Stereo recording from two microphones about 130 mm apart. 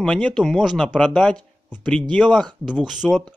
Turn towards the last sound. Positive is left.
turn(degrees=-5)  # may be behind; listen again after turning